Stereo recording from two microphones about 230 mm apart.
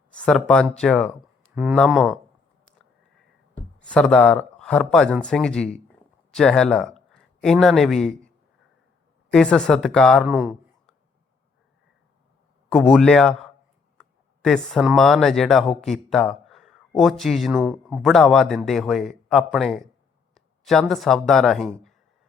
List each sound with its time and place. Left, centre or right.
0.2 s speech: centre
3.8 s speech: centre
9.3 s speech: centre
10.2 s a sound: centre
12.7 s speech: centre